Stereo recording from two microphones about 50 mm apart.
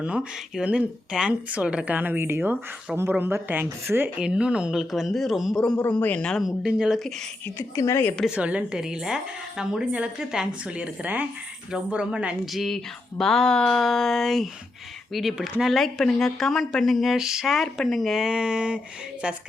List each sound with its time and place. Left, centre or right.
0.0 s a woman's voice: right
4.2 s a woman's voice: centre
4.7 s speech: centre
5.5 s a sound: centre
5.8 s speech: left
6.4 s speech: centre
7.8 s a woman's voice: left
8.4 s a woman's voice: right
8.8 s speech: centre
11.0 s speech: right
12.5 s a sound: centre
13.8 s speech: centre
18.3 s speech: centre